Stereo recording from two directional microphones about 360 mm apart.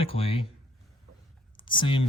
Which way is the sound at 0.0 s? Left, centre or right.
Centre.